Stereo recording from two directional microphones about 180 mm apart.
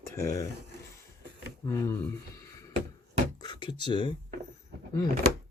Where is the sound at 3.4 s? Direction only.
25° left (ahead or behind).